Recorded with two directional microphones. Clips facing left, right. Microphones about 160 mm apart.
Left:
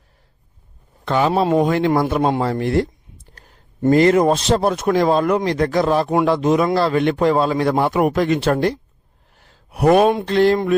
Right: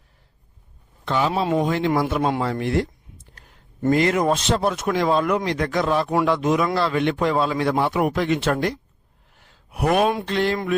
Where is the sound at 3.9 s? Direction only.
35° left (ahead or behind).